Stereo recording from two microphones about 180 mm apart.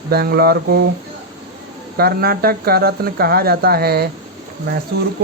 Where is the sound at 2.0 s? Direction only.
60° right (ahead or behind).